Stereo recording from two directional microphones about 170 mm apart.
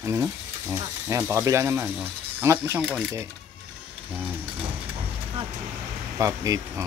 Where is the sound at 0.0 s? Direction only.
15° right (ahead or behind).